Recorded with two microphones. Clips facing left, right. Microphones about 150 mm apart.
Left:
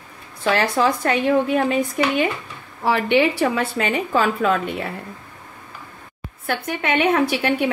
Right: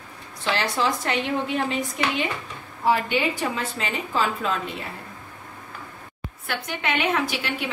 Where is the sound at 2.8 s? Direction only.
70° left (ahead or behind).